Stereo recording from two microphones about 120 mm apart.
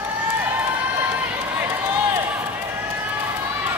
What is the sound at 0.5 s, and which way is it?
Run, 20° right (ahead or behind).